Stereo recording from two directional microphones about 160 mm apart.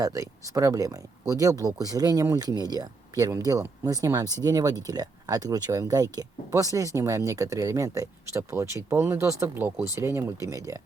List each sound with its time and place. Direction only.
0.0 s speech: 20° right (ahead or behind)